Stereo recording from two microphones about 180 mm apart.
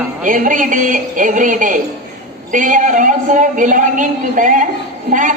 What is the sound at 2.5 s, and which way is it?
A woman's voice, 45° right (ahead or behind).